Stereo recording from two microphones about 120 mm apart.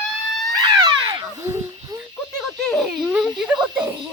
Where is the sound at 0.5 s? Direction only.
30° right (ahead or behind).